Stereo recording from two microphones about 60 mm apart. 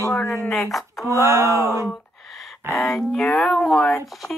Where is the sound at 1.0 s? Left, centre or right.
Right.